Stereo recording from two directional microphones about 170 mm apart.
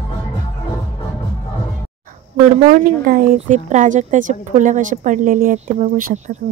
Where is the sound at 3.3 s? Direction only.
45° right (ahead or behind).